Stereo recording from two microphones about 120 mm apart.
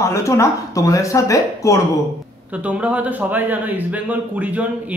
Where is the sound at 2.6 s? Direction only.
10° right (ahead or behind).